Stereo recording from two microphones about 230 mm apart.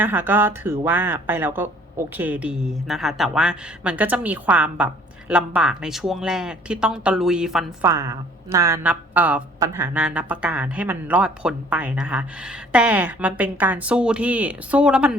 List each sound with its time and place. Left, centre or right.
0.0 s speech: centre